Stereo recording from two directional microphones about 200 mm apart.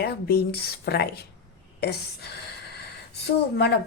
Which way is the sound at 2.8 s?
55° left (ahead or behind).